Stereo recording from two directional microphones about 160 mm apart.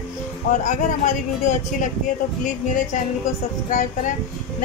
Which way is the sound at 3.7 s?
50° left (ahead or behind).